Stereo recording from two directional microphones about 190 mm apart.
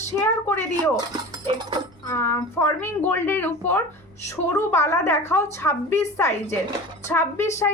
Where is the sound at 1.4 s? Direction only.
25° right (ahead or behind).